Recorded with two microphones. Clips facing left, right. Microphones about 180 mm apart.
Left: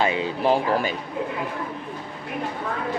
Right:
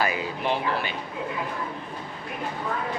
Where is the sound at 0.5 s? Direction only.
45° left (ahead or behind).